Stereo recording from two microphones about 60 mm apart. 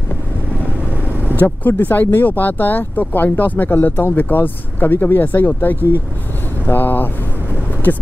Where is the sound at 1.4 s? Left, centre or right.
Left.